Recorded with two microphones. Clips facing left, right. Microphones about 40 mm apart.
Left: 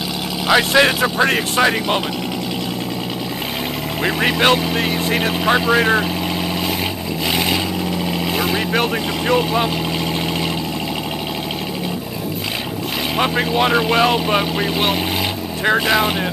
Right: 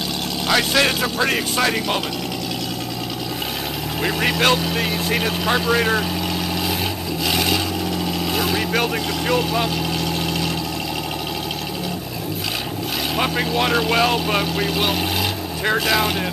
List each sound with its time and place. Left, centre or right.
0.5 s speech: centre
4.0 s speech: centre
7.2 s vehicle: centre
8.4 s speech: centre
13.1 s speech: centre